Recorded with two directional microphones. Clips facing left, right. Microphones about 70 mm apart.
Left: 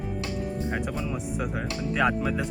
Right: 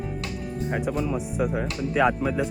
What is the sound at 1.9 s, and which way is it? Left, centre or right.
Speech, centre.